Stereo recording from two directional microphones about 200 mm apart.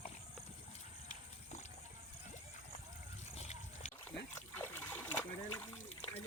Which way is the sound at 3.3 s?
35° left (ahead or behind).